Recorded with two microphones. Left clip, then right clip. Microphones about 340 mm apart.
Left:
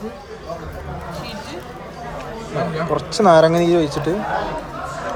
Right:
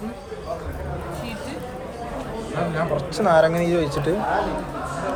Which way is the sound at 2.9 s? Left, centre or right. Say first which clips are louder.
Left 6 dB; centre.